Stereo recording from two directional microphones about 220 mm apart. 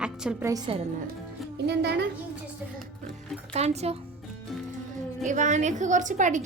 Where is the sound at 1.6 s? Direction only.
50° right (ahead or behind).